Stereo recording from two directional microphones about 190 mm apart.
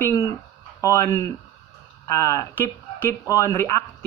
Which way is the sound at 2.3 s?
10° left (ahead or behind).